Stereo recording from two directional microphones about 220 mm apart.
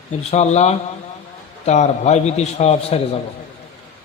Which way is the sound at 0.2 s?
30° left (ahead or behind).